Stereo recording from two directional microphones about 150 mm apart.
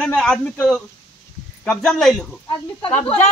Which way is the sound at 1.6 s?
5° left (ahead or behind).